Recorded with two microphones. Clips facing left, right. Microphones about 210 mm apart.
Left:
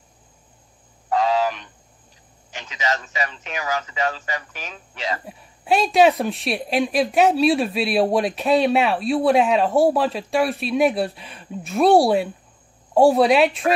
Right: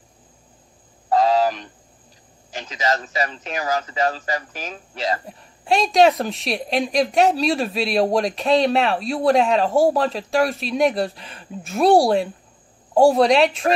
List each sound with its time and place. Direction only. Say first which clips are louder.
1.1 s a sound: right 3 dB; 35° right (ahead or behind)
2.5 s speech: right 3 dB; 35° right (ahead or behind)
5.2 s speech: even; 5° left (ahead or behind)